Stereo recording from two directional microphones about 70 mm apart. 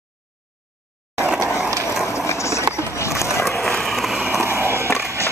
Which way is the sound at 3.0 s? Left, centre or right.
Left.